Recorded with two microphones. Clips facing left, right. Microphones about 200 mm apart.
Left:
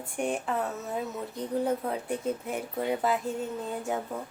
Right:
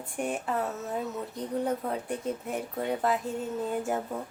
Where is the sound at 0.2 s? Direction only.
Centre (ahead or behind).